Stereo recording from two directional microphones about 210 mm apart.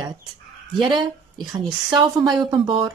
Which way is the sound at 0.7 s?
20° right (ahead or behind).